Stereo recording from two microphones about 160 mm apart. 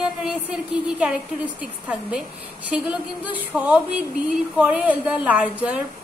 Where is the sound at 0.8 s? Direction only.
5° right (ahead or behind).